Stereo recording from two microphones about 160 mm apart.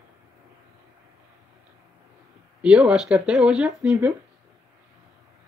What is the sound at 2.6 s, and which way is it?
Speech, 5° right (ahead or behind).